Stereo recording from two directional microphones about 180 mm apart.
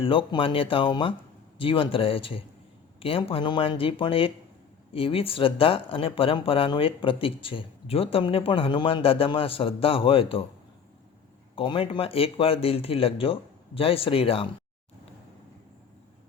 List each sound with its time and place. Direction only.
0.0 s speech: 30° left (ahead or behind)
11.5 s speech: 30° left (ahead or behind)